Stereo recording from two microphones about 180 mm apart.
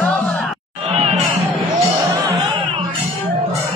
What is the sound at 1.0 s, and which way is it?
Music, 35° right (ahead or behind).